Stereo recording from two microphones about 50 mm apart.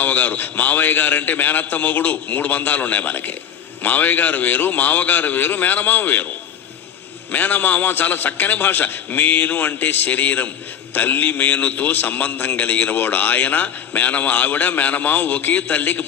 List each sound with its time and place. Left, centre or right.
0.0 s a man's voice: left
7.3 s a man's voice: left